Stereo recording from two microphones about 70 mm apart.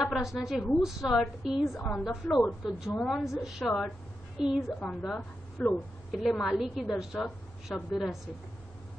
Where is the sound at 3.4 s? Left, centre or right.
Centre.